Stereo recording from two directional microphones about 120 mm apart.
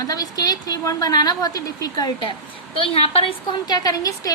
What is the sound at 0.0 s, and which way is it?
A woman's voice, 30° left (ahead or behind).